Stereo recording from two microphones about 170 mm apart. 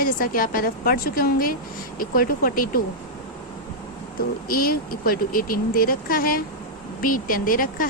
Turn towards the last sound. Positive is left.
turn(degrees=55)  # may be behind; listen again after turning